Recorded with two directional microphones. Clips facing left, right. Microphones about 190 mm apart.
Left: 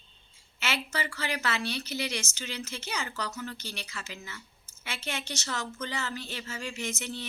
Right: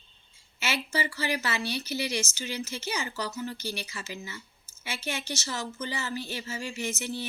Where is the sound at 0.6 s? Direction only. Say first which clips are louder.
Right 2 dB; 5° right (ahead or behind).